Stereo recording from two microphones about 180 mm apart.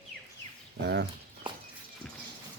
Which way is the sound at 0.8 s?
70° right (ahead or behind).